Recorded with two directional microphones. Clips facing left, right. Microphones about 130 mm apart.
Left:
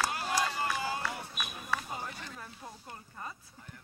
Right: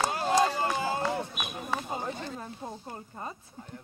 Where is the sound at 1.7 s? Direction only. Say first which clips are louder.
Right 4 dB; 25° right (ahead or behind).